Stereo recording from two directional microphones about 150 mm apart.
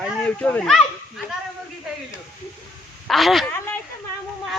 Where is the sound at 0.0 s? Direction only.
5° left (ahead or behind).